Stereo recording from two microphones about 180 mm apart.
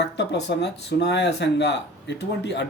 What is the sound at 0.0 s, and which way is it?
Speech, 70° left (ahead or behind).